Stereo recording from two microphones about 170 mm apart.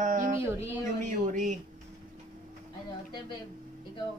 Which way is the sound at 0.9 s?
45° right (ahead or behind).